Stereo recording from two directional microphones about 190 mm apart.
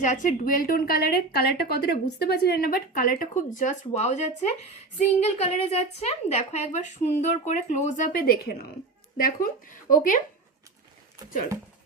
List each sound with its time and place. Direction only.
0.0 s a woman's voice: 40° left (ahead or behind)